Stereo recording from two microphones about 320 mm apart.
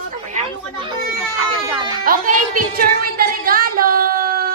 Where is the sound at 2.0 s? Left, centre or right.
Right.